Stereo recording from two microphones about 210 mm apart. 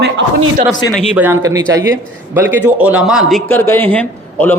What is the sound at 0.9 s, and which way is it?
A man's voice, 10° right (ahead or behind).